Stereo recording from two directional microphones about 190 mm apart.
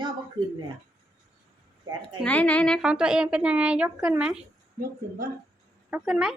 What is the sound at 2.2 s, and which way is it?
A woman's voice, 5° left (ahead or behind).